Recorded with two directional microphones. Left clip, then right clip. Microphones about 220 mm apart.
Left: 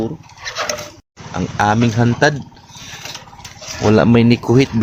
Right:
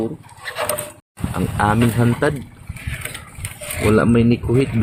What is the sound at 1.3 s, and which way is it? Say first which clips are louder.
Speech: left 3 dB; 10° left (ahead or behind).